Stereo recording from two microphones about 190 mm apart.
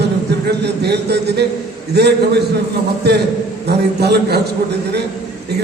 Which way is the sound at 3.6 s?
60° right (ahead or behind).